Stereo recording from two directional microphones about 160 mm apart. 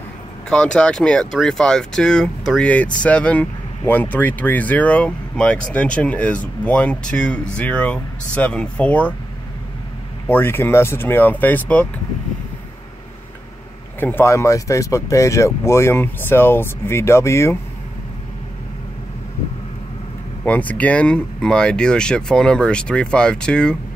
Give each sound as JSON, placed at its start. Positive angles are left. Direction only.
{"t": 0.5, "sound": "speech", "side_deg": 5}
{"t": 10.2, "sound": "speech", "side_deg": 10}
{"t": 13.9, "sound": "speech", "side_deg": 15}
{"t": 20.4, "sound": "speech", "side_deg": 10}